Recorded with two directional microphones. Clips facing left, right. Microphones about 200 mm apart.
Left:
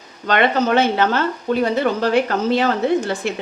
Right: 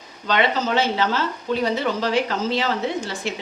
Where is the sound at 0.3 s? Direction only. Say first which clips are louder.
Left 4 dB; 55° left (ahead or behind).